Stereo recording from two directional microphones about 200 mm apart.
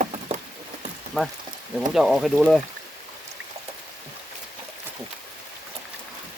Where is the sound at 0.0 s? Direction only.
35° right (ahead or behind).